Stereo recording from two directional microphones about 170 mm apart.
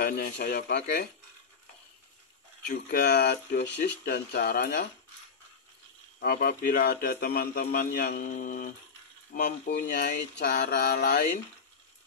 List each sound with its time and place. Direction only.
0.0 s speech: 70° left (ahead or behind)
2.7 s speech: 65° left (ahead or behind)
6.1 s speech: 75° left (ahead or behind)
8.3 s speech: 55° left (ahead or behind)
9.3 s speech: 80° left